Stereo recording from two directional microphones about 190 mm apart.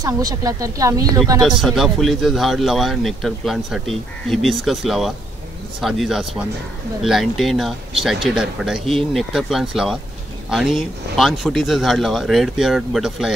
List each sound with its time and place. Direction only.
0.0 s speech: 20° right (ahead or behind)
1.4 s a man's voice: centre (ahead or behind)